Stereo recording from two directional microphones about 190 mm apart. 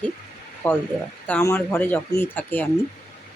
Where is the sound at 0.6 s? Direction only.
10° left (ahead or behind).